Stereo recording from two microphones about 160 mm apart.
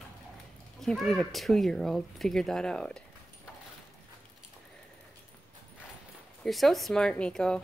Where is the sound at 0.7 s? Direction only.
Centre (ahead or behind).